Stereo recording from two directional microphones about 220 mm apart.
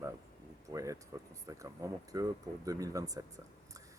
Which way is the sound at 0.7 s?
15° right (ahead or behind).